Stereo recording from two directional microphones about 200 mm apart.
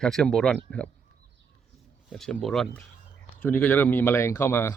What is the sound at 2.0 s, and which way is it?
Speech, centre (ahead or behind).